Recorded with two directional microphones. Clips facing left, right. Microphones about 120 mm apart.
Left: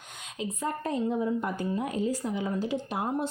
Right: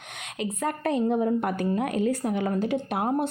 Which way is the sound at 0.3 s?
70° right (ahead or behind).